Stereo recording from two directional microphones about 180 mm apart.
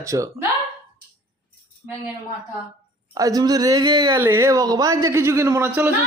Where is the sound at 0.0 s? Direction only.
15° right (ahead or behind).